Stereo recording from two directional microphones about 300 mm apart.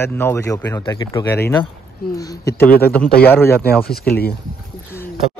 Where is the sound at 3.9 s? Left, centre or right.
Left.